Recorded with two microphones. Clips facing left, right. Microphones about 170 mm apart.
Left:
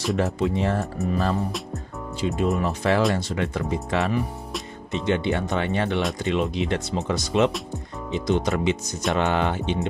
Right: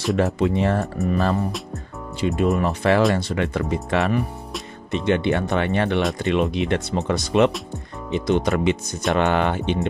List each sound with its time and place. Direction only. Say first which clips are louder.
0.2 s speech: right 4 dB; 65° right (ahead or behind)